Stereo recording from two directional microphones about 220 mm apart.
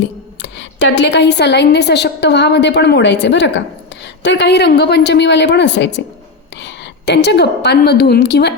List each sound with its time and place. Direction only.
0.0 s a woman's voice: 55° left (ahead or behind)